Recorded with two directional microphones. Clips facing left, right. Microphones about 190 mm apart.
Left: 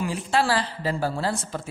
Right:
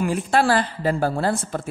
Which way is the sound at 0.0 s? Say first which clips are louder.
Right 4 dB; 55° right (ahead or behind).